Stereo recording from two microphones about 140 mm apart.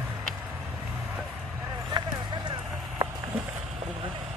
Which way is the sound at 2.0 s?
30° right (ahead or behind).